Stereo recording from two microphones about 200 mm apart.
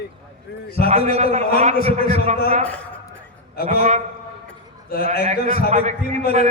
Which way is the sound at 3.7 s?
35° right (ahead or behind).